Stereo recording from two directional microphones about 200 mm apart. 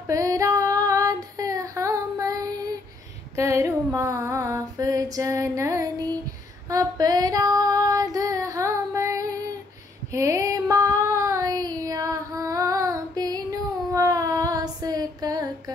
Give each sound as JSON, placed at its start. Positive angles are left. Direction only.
{"t": 0.0, "sound": "female singing", "side_deg": -15}
{"t": 10.1, "sound": "child singing", "side_deg": -15}